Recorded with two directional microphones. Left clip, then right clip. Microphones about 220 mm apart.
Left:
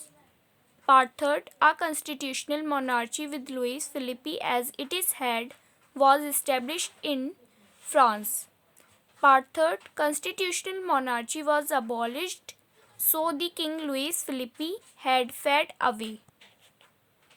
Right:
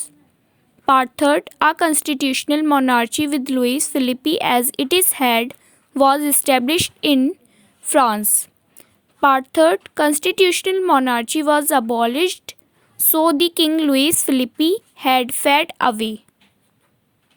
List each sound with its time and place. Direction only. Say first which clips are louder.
0.9 s speech: right 6 dB; 35° right (ahead or behind)